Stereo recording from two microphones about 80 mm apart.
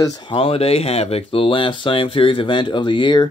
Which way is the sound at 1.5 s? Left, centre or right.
Left.